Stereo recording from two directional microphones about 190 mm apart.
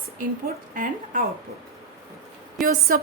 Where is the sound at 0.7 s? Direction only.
45° right (ahead or behind).